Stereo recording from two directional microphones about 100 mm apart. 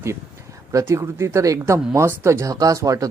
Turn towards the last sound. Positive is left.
turn(degrees=-35)  # may be behind; listen again after turning